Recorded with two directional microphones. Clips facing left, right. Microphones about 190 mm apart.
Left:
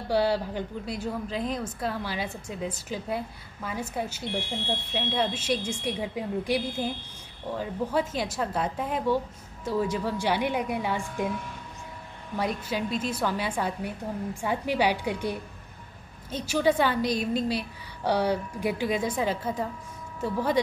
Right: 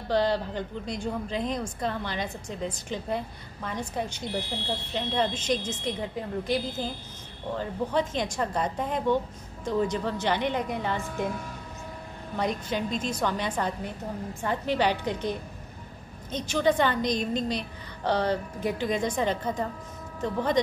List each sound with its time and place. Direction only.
0.1 s a woman's voice: 10° left (ahead or behind)
4.3 s speech: 35° right (ahead or behind)
4.9 s a woman's voice: 5° left (ahead or behind)
12.4 s a woman's voice: 5° left (ahead or behind)